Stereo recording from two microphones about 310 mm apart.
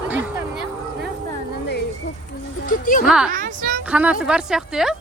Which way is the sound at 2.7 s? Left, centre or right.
Left.